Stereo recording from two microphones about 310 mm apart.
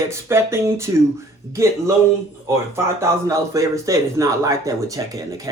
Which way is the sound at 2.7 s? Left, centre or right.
Centre.